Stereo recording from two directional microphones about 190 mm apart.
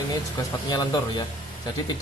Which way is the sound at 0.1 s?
20° left (ahead or behind).